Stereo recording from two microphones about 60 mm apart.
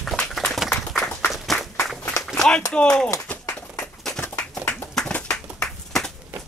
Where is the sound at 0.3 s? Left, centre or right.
Centre.